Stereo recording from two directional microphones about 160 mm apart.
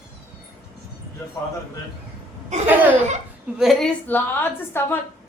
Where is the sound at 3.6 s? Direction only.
Centre (ahead or behind).